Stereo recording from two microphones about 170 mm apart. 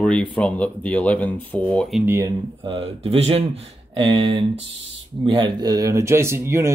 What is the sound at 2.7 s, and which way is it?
Speech, 35° right (ahead or behind).